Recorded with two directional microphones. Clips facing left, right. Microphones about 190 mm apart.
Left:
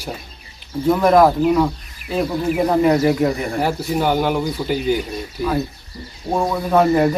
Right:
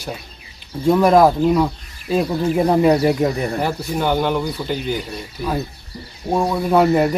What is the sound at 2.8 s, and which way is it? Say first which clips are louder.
Speech: even; 15° right (ahead or behind).